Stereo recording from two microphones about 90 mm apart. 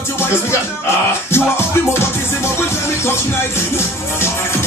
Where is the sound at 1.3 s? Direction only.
25° left (ahead or behind).